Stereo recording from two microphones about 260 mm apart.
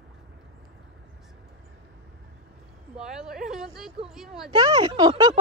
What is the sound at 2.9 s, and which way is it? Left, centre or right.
Speech, centre.